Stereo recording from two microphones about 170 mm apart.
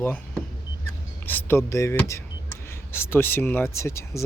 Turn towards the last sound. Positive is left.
turn(degrees=15)  # may be behind; listen again after turning